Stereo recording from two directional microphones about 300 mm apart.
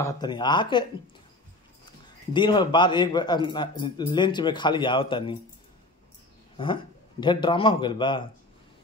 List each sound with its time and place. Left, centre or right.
0.0 s a man's voice: centre
2.0 s a man's voice: centre
6.5 s a man's voice: centre